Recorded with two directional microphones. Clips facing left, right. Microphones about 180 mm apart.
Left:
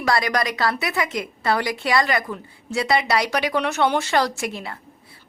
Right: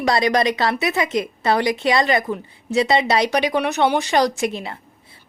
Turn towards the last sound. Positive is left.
turn(degrees=-20)  # may be behind; listen again after turning